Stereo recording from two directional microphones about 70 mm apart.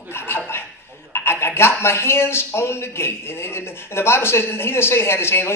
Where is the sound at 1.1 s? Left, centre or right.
Left.